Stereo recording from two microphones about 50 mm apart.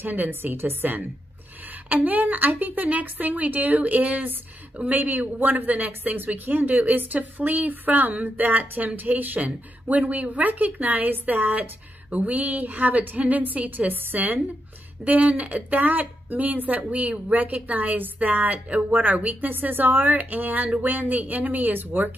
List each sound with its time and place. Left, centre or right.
0.0 s a woman's voice: right